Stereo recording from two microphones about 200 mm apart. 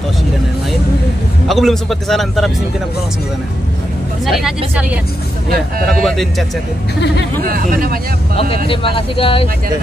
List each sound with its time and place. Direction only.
1.5 s a man's voice: centre (ahead or behind)
4.3 s a man's voice: centre (ahead or behind)
5.9 s a man's voice: centre (ahead or behind)
7.4 s speech: 45° right (ahead or behind)
8.6 s speech: 25° left (ahead or behind)